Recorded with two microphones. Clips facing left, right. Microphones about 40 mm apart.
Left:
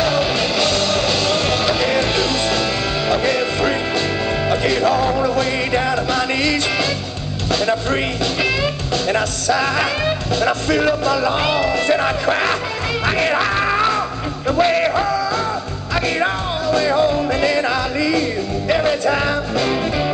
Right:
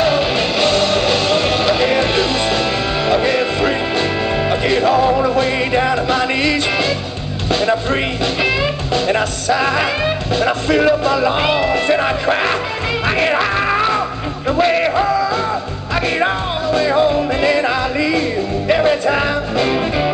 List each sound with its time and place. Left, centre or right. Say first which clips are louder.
0.0 s music: right 2 dB; right
7.5 s speech: right 2 dB; right
11.1 s music: right 2 dB; right
11.9 s music: right 2 dB; centre
15.0 s music: right 3 dB; right
16.6 s music: right 2 dB; right